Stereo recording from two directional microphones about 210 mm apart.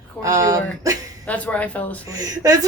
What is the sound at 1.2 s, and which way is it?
Speech, 5° left (ahead or behind).